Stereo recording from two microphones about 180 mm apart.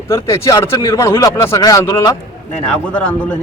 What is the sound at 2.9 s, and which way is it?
Speech, 5° left (ahead or behind).